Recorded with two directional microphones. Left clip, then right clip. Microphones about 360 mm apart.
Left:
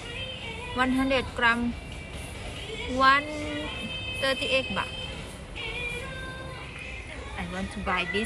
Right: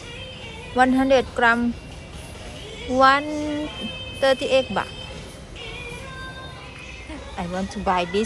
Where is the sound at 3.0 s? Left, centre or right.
Centre.